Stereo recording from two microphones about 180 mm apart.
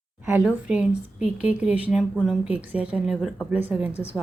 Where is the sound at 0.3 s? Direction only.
5° right (ahead or behind).